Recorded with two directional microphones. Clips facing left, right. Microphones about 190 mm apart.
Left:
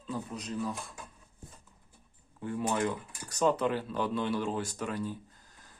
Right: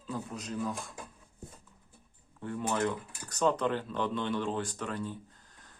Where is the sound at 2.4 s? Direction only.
10° left (ahead or behind).